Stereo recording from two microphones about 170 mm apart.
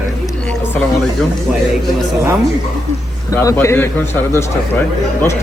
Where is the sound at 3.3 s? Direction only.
15° left (ahead or behind).